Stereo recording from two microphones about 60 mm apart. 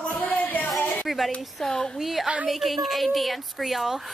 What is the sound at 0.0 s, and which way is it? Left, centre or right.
Music, left.